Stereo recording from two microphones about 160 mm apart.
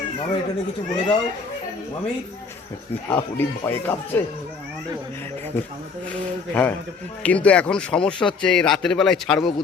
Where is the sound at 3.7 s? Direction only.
15° left (ahead or behind).